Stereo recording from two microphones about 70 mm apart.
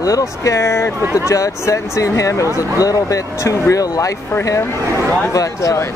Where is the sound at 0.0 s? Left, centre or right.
Left.